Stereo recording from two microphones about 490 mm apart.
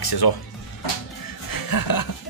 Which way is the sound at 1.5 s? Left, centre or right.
Left.